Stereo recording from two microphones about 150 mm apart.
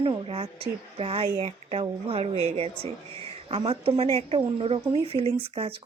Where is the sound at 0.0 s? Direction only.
40° right (ahead or behind).